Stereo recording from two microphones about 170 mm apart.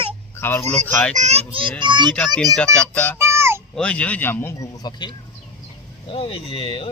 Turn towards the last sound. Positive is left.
turn(degrees=35)  # may be behind; listen again after turning